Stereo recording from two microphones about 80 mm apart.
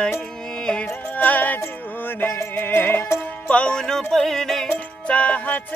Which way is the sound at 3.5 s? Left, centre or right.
Centre.